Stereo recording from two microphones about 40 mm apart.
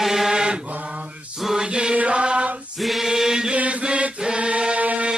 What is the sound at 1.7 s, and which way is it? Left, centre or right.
Chant, right.